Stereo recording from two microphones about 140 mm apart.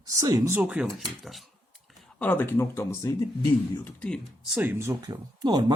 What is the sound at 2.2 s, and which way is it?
Speech, 15° left (ahead or behind).